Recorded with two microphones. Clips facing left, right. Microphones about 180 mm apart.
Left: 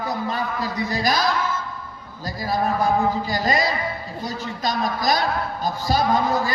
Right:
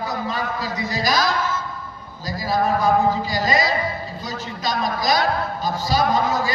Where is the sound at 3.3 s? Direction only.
55° left (ahead or behind).